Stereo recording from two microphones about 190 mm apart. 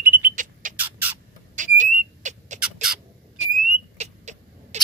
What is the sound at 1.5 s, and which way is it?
Whistle, 40° right (ahead or behind).